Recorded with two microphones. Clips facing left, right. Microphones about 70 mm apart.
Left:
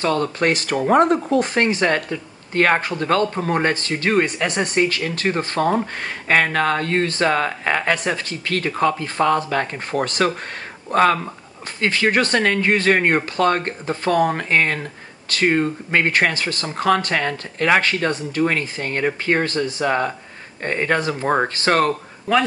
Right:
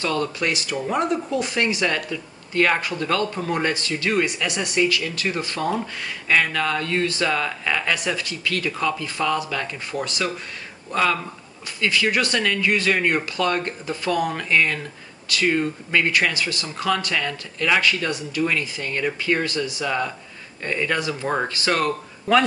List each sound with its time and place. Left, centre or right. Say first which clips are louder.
0.0 s speech: left 4 dB; left